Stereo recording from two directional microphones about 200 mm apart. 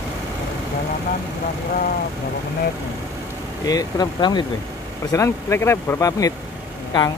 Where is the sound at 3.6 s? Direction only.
20° left (ahead or behind).